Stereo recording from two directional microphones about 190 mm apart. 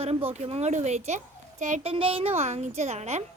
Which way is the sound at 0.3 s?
35° right (ahead or behind).